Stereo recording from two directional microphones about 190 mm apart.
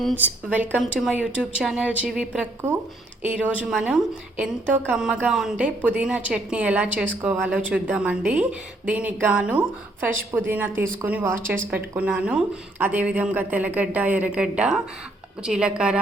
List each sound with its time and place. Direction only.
0.2 s a woman's voice: 10° right (ahead or behind)